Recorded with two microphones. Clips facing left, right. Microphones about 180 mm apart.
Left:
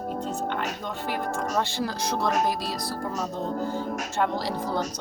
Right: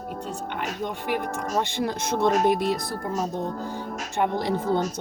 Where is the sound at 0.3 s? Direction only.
15° right (ahead or behind).